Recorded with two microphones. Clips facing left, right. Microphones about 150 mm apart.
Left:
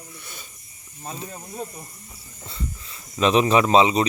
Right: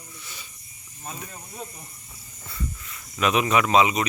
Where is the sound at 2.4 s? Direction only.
25° left (ahead or behind).